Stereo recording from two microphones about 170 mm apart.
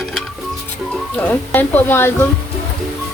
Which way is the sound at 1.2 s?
10° left (ahead or behind).